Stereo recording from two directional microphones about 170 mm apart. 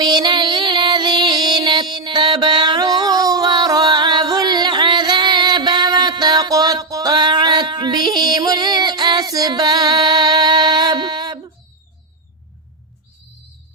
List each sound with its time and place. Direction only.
0.0 s music: 25° right (ahead or behind)